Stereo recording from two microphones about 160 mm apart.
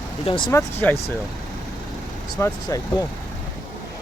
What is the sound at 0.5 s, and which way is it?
Speech, 15° left (ahead or behind).